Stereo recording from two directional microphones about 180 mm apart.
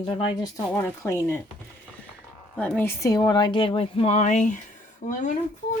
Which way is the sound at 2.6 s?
10° left (ahead or behind).